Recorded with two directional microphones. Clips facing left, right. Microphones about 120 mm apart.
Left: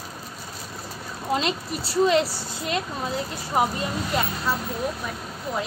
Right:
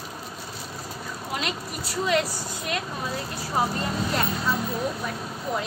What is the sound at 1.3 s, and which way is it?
A woman's voice, 30° left (ahead or behind).